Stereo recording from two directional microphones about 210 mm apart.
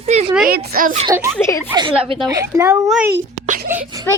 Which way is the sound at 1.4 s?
15° left (ahead or behind).